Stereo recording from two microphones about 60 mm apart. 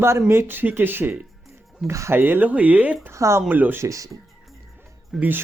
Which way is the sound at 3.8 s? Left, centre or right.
Right.